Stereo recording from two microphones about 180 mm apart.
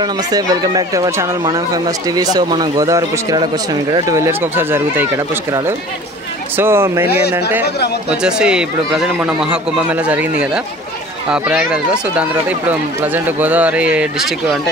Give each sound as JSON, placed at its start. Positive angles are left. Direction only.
{"t": 0.0, "sound": "speech", "side_deg": -20}
{"t": 11.2, "sound": "speech", "side_deg": -5}